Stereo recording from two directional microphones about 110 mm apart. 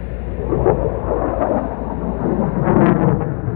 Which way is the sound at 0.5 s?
20° right (ahead or behind).